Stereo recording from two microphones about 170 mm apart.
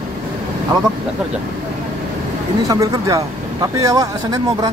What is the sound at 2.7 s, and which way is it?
Speech, 20° right (ahead or behind).